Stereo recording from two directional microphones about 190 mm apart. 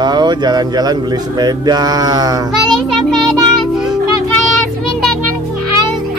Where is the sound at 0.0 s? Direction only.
20° right (ahead or behind).